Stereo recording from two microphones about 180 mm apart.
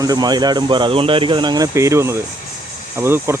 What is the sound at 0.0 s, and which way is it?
Speech, 20° right (ahead or behind).